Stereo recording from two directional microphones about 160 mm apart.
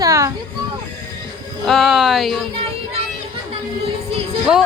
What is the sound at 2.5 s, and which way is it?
Music, 40° right (ahead or behind).